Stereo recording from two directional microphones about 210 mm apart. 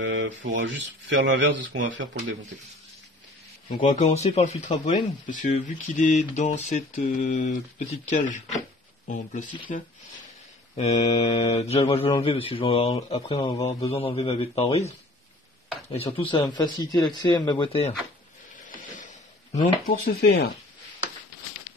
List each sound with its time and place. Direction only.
0.0 s speech: 60° right (ahead or behind)
3.8 s speech: 35° left (ahead or behind)
18.8 s a sound: 35° left (ahead or behind)
19.9 s speech: 50° left (ahead or behind)